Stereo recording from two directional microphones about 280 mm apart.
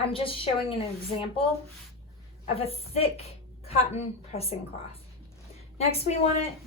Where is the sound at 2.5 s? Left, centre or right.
Left.